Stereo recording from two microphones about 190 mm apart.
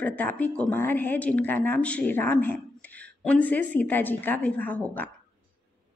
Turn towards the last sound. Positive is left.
turn(degrees=10)  # may be behind; listen again after turning